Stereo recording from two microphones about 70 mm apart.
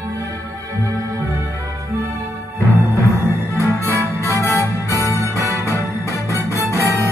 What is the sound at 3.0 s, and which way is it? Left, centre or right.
Music, left.